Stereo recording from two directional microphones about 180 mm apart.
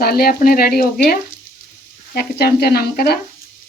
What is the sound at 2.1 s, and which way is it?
Speech, 60° left (ahead or behind).